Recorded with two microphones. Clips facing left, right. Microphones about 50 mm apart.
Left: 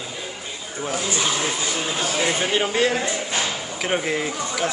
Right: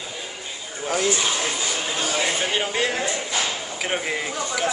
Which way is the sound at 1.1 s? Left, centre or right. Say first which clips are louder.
Left 1 dB; centre.